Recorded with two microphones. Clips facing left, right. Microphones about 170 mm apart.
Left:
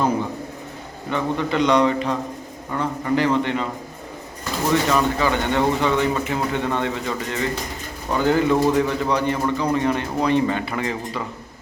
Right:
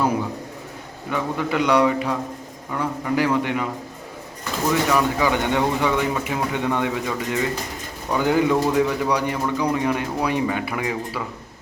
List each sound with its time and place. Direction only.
1.1 s speech: 5° right (ahead or behind)
4.7 s speech: 10° right (ahead or behind)